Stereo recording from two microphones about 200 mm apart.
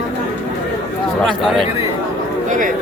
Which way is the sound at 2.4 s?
40° right (ahead or behind).